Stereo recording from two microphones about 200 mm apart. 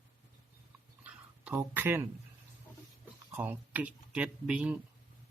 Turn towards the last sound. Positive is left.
turn(degrees=-5)  # may be behind; listen again after turning